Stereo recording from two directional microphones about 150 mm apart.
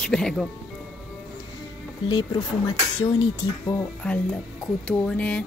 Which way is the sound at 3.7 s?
10° left (ahead or behind).